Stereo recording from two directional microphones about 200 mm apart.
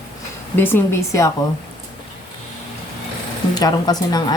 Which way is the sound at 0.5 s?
10° left (ahead or behind).